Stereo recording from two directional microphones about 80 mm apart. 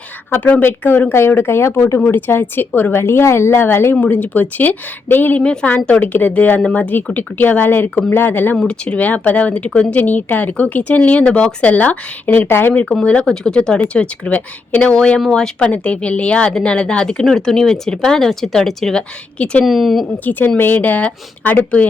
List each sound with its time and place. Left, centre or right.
0.3 s speech: left
3.9 s speech: centre
8.5 s speech: centre; by 12.8 s left
12.8 s speech: centre
20.6 s speech: left